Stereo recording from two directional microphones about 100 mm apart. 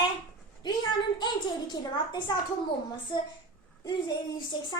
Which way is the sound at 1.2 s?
45° left (ahead or behind).